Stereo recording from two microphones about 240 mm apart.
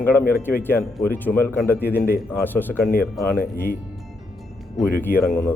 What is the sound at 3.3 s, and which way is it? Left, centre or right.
Speech, left.